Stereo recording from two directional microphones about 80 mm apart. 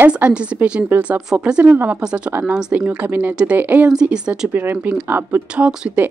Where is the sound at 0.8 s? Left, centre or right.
Right.